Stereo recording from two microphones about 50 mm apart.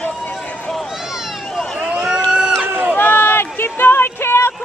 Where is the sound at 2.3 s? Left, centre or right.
Centre.